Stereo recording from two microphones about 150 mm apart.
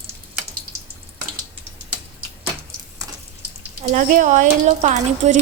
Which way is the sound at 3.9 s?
60° right (ahead or behind).